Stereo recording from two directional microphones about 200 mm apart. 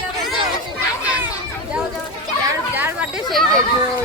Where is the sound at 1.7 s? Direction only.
5° right (ahead or behind).